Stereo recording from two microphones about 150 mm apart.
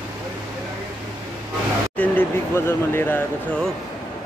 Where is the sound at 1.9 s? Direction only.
15° left (ahead or behind).